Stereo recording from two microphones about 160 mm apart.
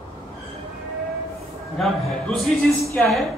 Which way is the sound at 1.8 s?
Centre (ahead or behind).